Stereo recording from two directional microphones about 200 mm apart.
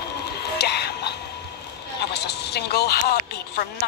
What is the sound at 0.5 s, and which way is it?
Music, 55° left (ahead or behind).